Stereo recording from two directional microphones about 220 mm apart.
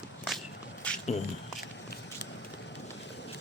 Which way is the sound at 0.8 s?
5° left (ahead or behind).